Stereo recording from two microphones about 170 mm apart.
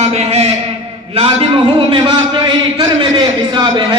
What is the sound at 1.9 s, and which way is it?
A man's voice, 30° right (ahead or behind).